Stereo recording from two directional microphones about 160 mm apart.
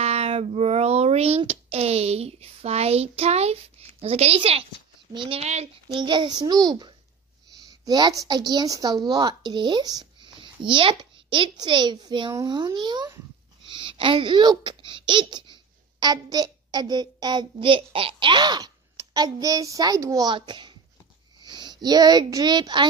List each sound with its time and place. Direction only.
0.0 s a child's voice: 40° right (ahead or behind)
6.0 s a woman's voice: 30° right (ahead or behind)